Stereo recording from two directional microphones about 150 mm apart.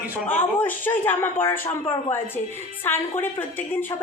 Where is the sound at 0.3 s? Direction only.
15° left (ahead or behind).